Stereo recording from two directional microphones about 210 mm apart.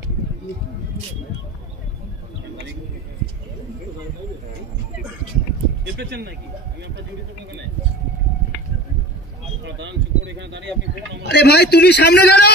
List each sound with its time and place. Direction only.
5.9 s speech: 50° right (ahead or behind)
9.7 s speech: 60° right (ahead or behind)
11.2 s a man's voice: 50° left (ahead or behind)